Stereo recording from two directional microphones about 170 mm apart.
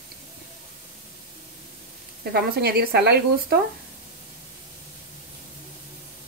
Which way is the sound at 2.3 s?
65° right (ahead or behind).